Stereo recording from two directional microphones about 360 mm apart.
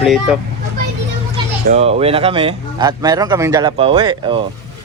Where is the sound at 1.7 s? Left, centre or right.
Centre.